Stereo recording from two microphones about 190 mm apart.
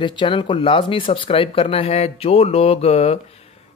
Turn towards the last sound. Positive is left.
turn(degrees=30)  # may be behind; listen again after turning